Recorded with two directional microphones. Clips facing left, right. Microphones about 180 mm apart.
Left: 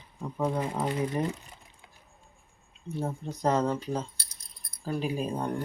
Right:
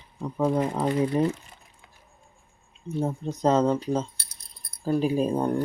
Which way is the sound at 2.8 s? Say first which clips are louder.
Right 5 dB; 20° right (ahead or behind).